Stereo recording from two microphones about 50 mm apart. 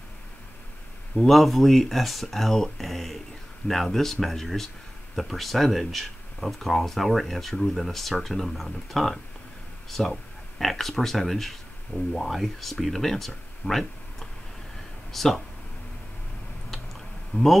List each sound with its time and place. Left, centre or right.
1.1 s speech: centre
13.6 s speech: left
15.1 s speech: centre
17.3 s speech: left